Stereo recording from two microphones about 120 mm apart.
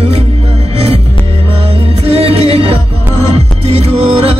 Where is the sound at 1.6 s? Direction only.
55° right (ahead or behind).